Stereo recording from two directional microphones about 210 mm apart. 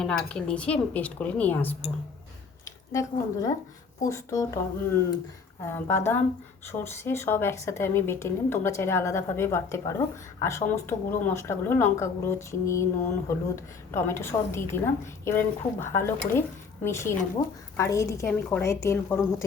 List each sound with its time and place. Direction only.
0.0 s a woman's voice: 5° left (ahead or behind)